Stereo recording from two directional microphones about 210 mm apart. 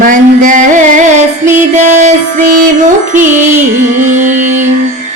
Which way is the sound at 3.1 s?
35° right (ahead or behind).